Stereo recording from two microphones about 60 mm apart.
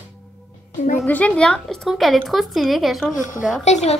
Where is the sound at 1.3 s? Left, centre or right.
Centre.